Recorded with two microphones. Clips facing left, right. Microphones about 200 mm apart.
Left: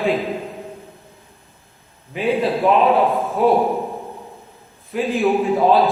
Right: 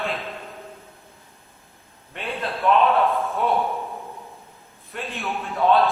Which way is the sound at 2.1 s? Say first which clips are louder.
Left 11 dB; centre (ahead or behind).